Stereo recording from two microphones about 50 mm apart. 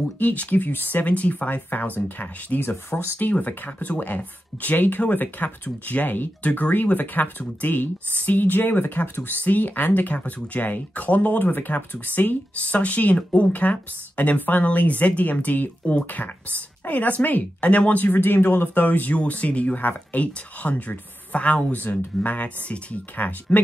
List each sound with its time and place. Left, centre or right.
0.2 s speech: left
21.7 s speech: left